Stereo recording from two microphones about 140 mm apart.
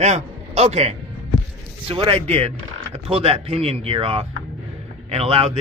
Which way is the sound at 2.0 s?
45° right (ahead or behind).